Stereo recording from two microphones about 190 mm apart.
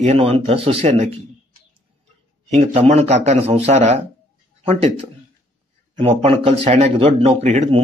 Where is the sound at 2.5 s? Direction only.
35° right (ahead or behind).